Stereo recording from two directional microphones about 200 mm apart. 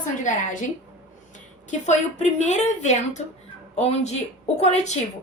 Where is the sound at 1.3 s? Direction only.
35° left (ahead or behind).